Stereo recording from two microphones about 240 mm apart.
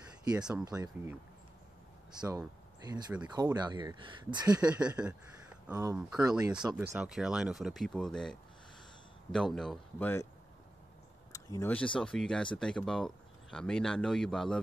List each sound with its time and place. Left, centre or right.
0.3 s speech: centre
0.7 s speech: centre
2.1 s speech: centre
4.5 s speech: centre
11.3 s speech: centre